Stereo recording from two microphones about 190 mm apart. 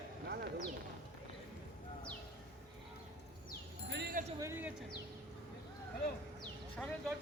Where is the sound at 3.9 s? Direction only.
55° right (ahead or behind).